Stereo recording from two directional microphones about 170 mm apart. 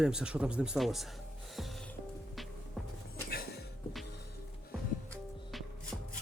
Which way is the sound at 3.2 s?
70° left (ahead or behind).